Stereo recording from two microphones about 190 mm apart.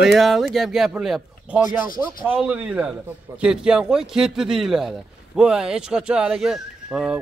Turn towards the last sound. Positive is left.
turn(degrees=-5)  # may be behind; listen again after turning